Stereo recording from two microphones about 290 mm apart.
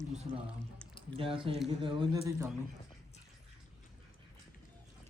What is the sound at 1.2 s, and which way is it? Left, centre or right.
A man's voice, centre.